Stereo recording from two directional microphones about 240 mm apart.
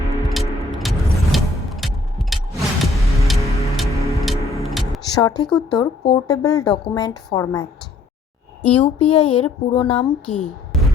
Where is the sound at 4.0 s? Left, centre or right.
Centre.